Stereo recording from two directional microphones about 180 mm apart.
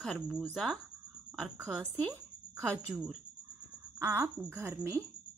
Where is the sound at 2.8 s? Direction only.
5° right (ahead or behind).